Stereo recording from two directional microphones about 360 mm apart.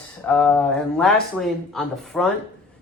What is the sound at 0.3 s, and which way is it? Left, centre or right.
Speech, centre.